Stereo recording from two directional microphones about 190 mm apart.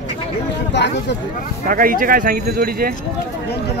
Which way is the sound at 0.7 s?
65° left (ahead or behind).